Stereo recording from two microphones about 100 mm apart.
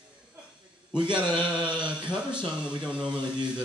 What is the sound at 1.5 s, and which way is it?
Speech, 10° right (ahead or behind).